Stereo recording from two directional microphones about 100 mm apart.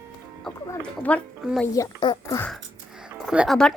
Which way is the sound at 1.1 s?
15° left (ahead or behind).